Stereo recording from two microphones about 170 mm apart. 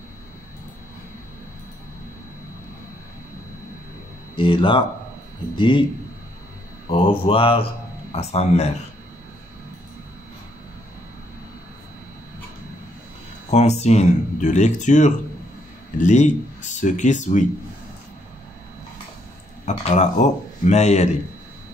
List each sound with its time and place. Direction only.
4.4 s speech: 30° left (ahead or behind)
6.9 s speech: 35° left (ahead or behind)
13.5 s speech: 40° left (ahead or behind)
19.6 s speech: 45° left (ahead or behind)